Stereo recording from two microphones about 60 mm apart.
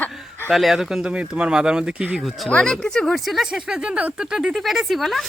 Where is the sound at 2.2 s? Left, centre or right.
Centre.